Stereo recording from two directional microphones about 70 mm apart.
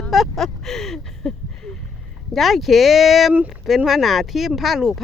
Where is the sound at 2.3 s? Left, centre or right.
Centre.